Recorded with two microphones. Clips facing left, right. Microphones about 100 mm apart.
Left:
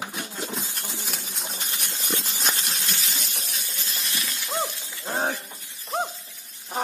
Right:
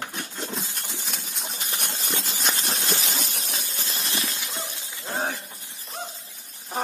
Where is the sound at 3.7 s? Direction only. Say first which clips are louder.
Right 2 dB; 30° right (ahead or behind).